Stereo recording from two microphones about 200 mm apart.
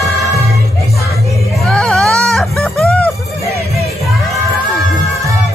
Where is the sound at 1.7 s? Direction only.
5° left (ahead or behind).